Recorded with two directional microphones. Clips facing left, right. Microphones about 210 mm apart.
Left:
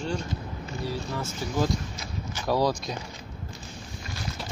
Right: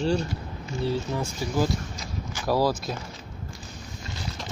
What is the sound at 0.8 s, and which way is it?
Speech, 15° right (ahead or behind).